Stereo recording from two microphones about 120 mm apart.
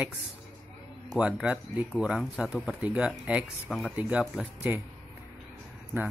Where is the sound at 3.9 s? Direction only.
10° right (ahead or behind).